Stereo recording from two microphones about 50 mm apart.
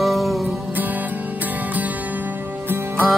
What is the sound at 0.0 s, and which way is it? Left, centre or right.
Music, centre.